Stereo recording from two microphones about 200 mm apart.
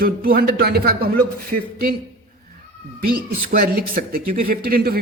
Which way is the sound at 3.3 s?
45° right (ahead or behind).